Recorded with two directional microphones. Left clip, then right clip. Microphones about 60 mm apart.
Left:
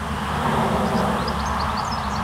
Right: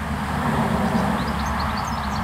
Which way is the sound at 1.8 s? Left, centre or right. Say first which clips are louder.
Left 1 dB; centre.